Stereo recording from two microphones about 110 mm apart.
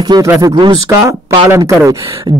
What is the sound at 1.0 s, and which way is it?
Speech, 20° right (ahead or behind).